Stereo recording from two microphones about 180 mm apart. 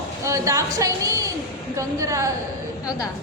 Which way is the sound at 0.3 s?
15° right (ahead or behind).